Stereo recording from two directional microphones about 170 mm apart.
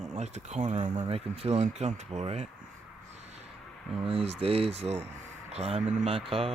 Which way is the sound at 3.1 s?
40° right (ahead or behind).